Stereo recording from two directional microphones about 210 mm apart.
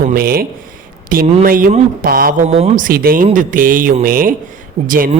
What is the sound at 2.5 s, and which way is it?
Speech, 30° right (ahead or behind).